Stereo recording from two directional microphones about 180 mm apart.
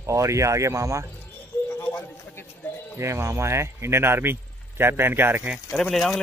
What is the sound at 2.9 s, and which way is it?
A man's voice, 15° right (ahead or behind).